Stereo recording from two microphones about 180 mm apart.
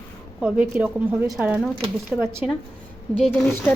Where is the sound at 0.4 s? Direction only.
10° right (ahead or behind).